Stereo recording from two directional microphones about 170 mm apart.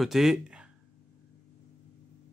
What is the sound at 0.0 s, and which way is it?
Speech, centre (ahead or behind).